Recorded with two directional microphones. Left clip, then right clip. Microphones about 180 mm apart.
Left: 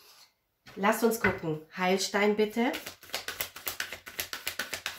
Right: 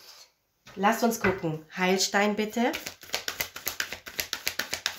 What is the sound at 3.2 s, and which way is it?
Music, 30° right (ahead or behind).